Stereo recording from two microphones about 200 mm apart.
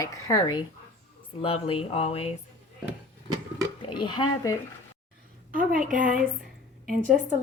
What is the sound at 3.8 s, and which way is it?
Speech, 25° left (ahead or behind).